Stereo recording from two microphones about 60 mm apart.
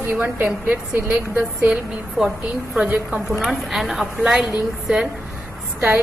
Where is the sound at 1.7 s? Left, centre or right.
Centre.